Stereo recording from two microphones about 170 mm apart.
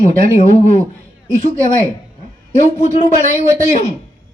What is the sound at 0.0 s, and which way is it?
Speech, 40° left (ahead or behind).